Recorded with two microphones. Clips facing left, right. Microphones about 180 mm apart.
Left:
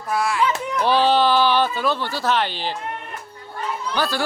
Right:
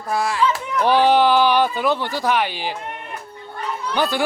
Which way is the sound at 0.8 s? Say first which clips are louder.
Right 3 dB; 15° right (ahead or behind).